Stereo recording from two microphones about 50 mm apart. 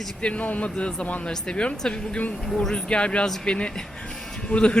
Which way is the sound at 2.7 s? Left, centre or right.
Centre.